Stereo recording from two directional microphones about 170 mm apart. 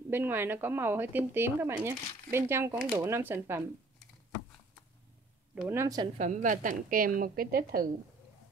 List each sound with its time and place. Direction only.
0.1 s speech: 10° right (ahead or behind)
5.5 s speech: 10° right (ahead or behind)
6.1 s a woman's voice: 50° right (ahead or behind)